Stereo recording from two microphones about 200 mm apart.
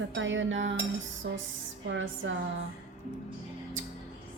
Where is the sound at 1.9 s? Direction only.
70° right (ahead or behind).